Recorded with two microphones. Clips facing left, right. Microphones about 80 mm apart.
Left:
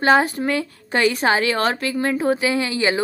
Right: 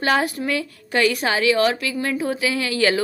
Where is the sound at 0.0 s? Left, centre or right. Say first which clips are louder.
Left 4 dB; left.